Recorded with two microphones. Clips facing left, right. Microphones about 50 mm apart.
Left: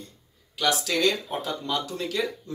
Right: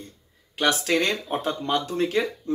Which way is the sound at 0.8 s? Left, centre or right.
Right.